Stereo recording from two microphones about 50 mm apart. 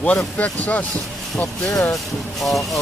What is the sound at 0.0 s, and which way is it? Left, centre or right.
Speech, left.